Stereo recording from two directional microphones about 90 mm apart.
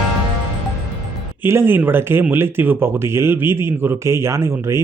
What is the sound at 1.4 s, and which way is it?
Speech, 25° right (ahead or behind).